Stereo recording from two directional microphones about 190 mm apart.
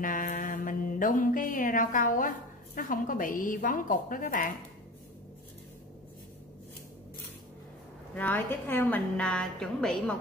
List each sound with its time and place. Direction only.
0.0 s mantra: 45° left (ahead or behind)
8.1 s a woman's voice: 10° left (ahead or behind)